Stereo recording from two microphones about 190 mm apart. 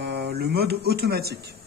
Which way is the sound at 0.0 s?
60° right (ahead or behind).